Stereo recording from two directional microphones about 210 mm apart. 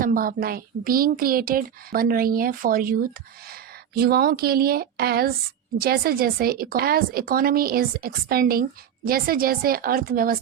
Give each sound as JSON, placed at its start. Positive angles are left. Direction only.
{"t": 0.0, "sound": "speech", "side_deg": -40}